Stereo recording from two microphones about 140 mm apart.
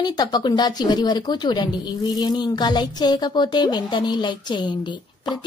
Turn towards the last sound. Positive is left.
turn(degrees=30)  # may be behind; listen again after turning